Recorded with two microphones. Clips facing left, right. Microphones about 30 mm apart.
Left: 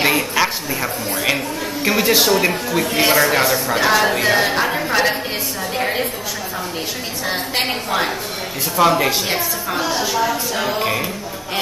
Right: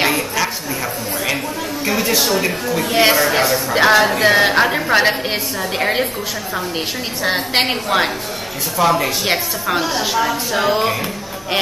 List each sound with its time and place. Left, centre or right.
1.9 s a woman's voice: centre
2.9 s a woman's voice: right
3.2 s speech: centre
3.7 s a woman's voice: right
7.6 s a woman's voice: right
8.7 s a woman's voice: centre
9.3 s a woman's voice: right